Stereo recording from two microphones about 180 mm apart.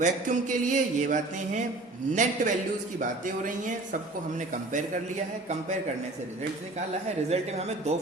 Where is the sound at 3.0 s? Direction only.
45° right (ahead or behind).